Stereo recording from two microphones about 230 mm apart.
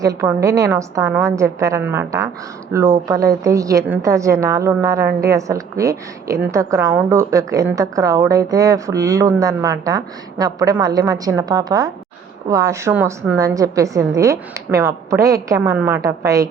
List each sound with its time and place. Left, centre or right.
0.0 s a woman's voice: centre